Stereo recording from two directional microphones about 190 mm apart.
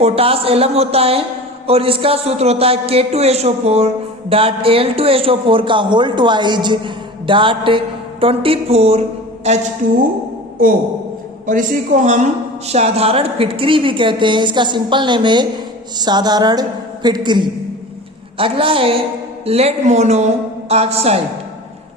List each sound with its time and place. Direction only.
0.0 s a woman's voice: 30° right (ahead or behind)
11.4 s a man's voice: 45° right (ahead or behind)